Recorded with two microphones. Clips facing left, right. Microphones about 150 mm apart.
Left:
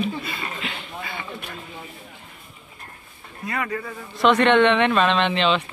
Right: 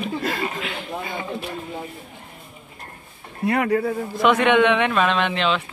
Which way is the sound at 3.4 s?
60° right (ahead or behind).